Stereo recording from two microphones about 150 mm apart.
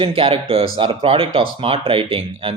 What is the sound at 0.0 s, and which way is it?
Speech, 40° right (ahead or behind).